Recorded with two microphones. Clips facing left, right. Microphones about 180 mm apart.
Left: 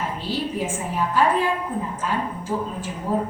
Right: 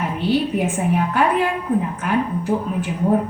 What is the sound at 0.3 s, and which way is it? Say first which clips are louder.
A woman's voice: right 8 dB; 65° right (ahead or behind).